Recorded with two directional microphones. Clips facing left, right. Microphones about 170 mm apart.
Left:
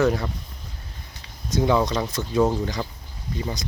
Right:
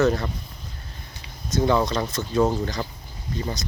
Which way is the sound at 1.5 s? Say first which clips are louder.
Even; 15° left (ahead or behind).